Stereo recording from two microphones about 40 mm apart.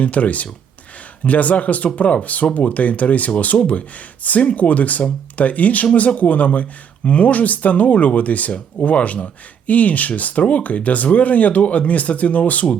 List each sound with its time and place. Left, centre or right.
0.0 s speech: left